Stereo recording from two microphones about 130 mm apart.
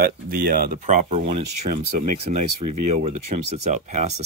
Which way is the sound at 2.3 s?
90° right.